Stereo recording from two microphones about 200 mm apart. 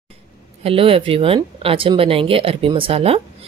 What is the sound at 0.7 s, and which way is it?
Speech, 30° right (ahead or behind).